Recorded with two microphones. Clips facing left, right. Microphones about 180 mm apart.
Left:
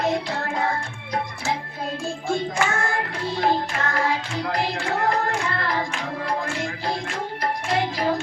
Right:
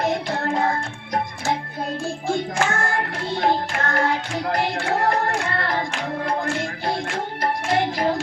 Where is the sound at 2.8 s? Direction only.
50° right (ahead or behind).